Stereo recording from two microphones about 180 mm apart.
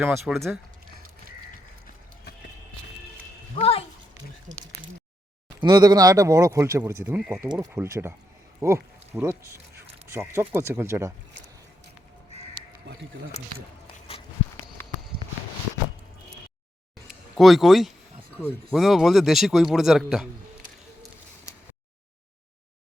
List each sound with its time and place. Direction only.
0.0 s speech: 10° right (ahead or behind)
0.3 s speech: centre (ahead or behind)
3.6 s a sound: 35° left (ahead or behind)
5.5 s speech: 25° right (ahead or behind)
7.2 s speech: 5° right (ahead or behind)
14.8 s walk: 10° left (ahead or behind)
17.3 s speech: centre (ahead or behind)